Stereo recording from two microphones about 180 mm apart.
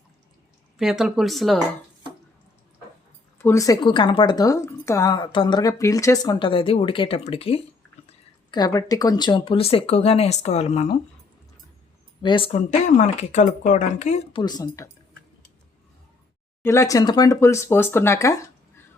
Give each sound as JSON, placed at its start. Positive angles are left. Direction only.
{"t": 0.8, "sound": "speech", "side_deg": 0}
{"t": 3.3, "sound": "a woman's voice", "side_deg": 15}
{"t": 12.2, "sound": "speech", "side_deg": 30}
{"t": 14.4, "sound": "a woman's voice", "side_deg": 20}
{"t": 16.6, "sound": "speech", "side_deg": 15}